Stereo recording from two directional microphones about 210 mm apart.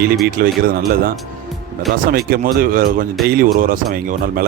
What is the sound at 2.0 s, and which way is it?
A man's voice, 45° right (ahead or behind).